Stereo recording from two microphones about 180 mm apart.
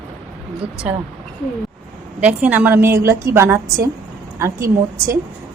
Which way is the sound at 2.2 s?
10° right (ahead or behind).